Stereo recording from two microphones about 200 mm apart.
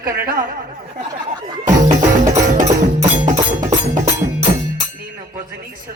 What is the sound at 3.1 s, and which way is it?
Music, 40° right (ahead or behind).